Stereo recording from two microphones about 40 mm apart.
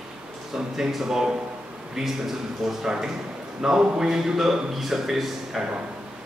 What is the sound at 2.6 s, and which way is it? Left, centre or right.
A man's voice, centre.